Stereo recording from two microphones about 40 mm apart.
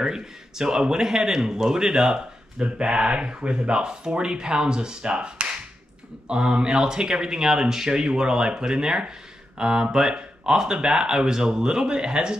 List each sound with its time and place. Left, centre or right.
0.0 s speech: centre